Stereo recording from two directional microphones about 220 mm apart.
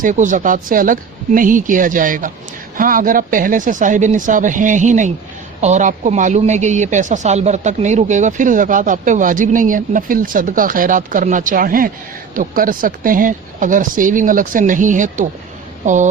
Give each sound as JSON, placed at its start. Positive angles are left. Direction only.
{"t": 0.0, "sound": "speech", "side_deg": -35}